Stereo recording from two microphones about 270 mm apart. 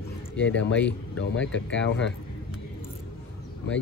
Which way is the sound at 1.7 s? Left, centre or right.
Left.